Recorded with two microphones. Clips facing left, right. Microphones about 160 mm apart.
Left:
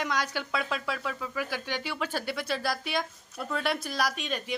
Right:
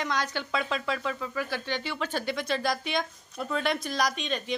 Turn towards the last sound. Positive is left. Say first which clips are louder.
# right 2 dB
turn(degrees=5)  # may be behind; listen again after turning